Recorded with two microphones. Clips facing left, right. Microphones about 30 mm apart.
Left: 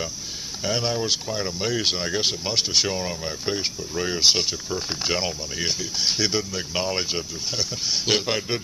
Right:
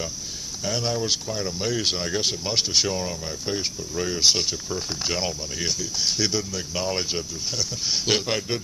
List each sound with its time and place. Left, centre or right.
0.7 s speech: centre
2.9 s speech: centre